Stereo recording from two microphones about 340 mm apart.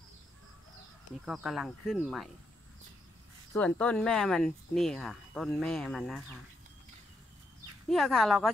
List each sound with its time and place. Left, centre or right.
1.2 s speech: centre
3.5 s speech: centre
7.9 s speech: centre